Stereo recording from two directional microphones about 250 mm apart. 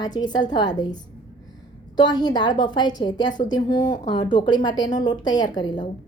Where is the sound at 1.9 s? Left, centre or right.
Centre.